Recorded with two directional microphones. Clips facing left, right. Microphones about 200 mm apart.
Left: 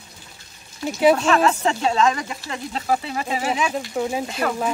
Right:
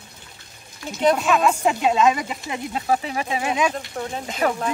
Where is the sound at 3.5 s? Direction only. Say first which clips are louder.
Even; 5° left (ahead or behind).